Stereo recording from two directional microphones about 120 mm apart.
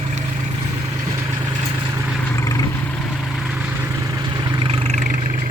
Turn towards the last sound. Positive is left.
turn(degrees=-50)  # may be behind; listen again after turning